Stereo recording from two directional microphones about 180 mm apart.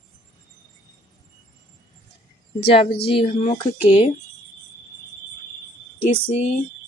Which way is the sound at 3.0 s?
30° left (ahead or behind).